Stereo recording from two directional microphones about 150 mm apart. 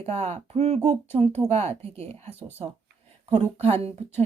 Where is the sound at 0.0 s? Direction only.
45° right (ahead or behind).